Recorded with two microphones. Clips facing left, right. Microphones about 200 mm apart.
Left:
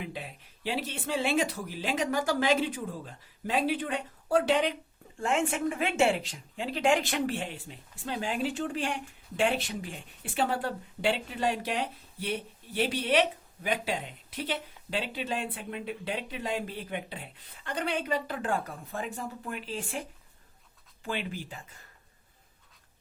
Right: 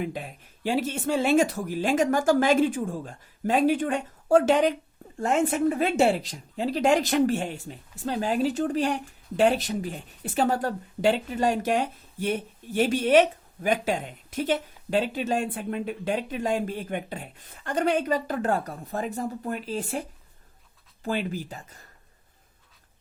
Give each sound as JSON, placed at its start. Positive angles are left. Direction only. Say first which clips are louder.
{"t": 0.0, "sound": "speech", "louder": "right 7 dB", "side_deg": -45}